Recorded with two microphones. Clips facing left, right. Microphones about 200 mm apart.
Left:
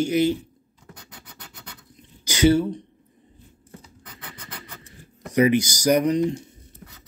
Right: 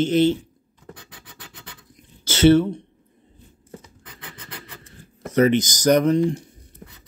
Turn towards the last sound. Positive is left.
turn(degrees=20)  # may be behind; listen again after turning